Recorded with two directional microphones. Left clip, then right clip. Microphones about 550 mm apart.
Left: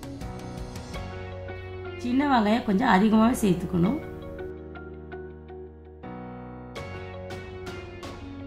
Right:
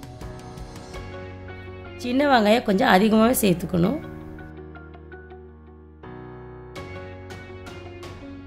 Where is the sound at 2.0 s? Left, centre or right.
Centre.